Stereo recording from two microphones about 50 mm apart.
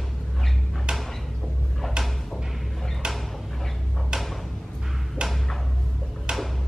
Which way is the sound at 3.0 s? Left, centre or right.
Centre.